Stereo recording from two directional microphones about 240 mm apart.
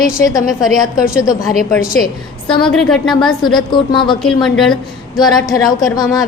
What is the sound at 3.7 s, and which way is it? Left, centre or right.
Speech, centre.